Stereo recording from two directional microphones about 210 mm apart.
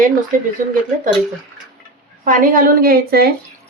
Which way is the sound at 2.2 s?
40° right (ahead or behind).